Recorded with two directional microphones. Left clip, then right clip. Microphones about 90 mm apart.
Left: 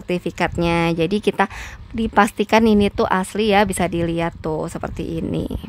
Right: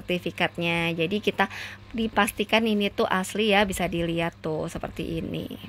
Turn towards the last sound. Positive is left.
turn(degrees=50)  # may be behind; listen again after turning